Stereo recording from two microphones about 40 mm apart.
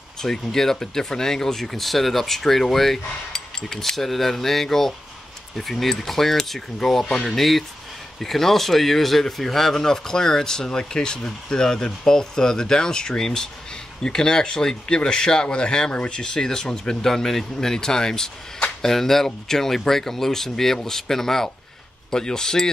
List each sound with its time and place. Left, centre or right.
0.2 s speech: centre